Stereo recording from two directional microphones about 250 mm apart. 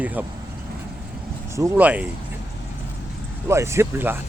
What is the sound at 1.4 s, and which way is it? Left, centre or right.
Speech, centre.